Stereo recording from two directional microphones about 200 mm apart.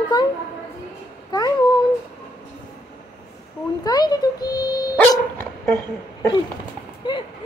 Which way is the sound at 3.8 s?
20° left (ahead or behind).